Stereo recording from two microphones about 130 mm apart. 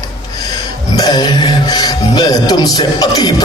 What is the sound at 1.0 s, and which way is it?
Speech, 30° left (ahead or behind).